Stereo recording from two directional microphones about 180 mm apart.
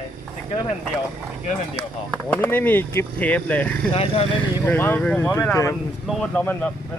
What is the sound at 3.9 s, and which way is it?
Speech, 35° left (ahead or behind).